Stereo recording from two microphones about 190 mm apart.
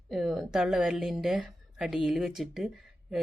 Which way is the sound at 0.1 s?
Centre (ahead or behind).